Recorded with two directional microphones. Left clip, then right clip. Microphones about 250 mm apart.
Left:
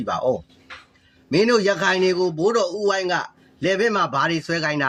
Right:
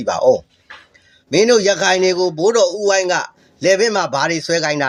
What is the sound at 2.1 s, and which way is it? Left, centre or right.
Speech, centre.